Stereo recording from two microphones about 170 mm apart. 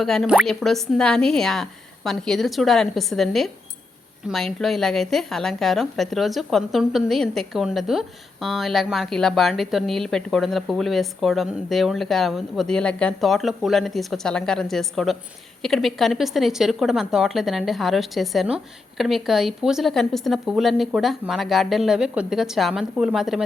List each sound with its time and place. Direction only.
0.0 s a woman's voice: centre (ahead or behind)